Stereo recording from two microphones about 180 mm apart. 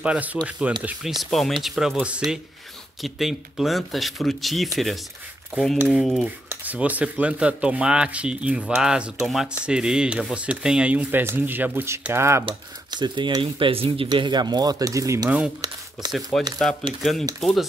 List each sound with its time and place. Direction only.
0.0 s speech: 5° right (ahead or behind)
12.4 s speech: 25° right (ahead or behind)
16.1 s speech: centre (ahead or behind)